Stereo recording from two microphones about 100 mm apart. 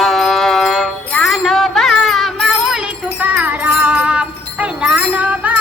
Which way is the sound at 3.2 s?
15° right (ahead or behind).